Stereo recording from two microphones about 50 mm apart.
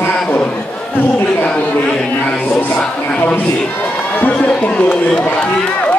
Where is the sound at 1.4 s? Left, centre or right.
Left.